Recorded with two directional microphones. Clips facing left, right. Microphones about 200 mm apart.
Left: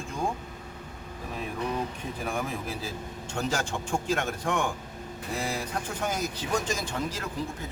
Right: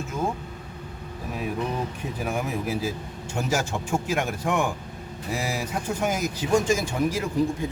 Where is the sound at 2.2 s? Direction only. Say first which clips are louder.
Right 4 dB; 10° right (ahead or behind).